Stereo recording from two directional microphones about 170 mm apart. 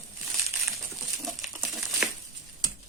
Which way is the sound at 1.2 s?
Centre (ahead or behind).